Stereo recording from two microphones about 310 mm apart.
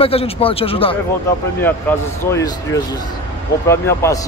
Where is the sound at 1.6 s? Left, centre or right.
Centre.